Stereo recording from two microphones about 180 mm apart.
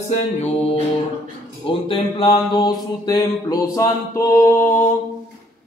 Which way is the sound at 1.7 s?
30° left (ahead or behind).